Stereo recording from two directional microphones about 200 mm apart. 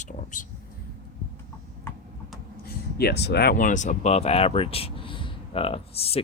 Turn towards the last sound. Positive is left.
turn(degrees=30)  # may be behind; listen again after turning